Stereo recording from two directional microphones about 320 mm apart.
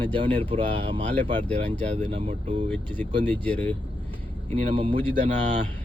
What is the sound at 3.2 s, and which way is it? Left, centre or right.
Speech, centre.